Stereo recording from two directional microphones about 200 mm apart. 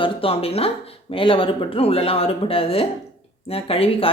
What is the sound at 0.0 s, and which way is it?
Speech, 30° left (ahead or behind).